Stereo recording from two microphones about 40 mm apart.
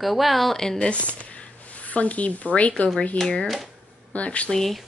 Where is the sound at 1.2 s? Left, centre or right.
Left.